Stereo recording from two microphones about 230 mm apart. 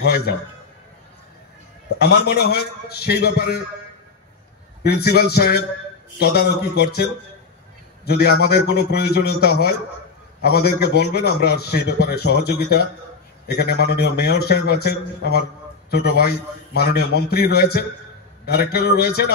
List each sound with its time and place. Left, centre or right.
0.0 s a man's voice: left
2.0 s a man's voice: left
4.8 s a man's voice: left